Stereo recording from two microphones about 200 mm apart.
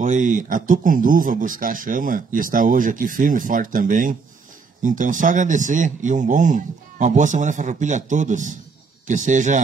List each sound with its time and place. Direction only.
0.0 s speech: 40° right (ahead or behind)